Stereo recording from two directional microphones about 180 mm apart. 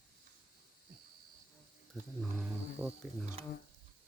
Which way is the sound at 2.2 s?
5° right (ahead or behind).